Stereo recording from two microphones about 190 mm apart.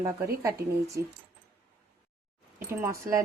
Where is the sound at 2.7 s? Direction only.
15° right (ahead or behind).